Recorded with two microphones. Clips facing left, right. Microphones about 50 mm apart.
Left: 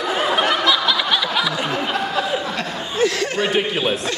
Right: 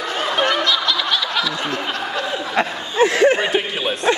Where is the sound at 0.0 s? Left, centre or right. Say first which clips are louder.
Left 1 dB; centre.